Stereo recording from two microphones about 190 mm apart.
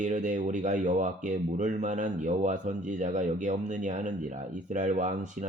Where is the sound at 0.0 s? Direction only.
40° right (ahead or behind).